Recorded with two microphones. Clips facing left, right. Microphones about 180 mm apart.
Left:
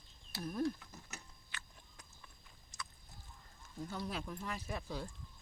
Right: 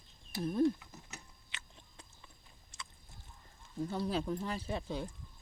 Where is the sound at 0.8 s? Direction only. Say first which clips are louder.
Right 1 dB; 20° right (ahead or behind).